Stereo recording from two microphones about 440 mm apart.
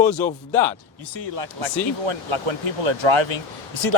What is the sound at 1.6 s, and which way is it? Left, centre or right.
Speech, right.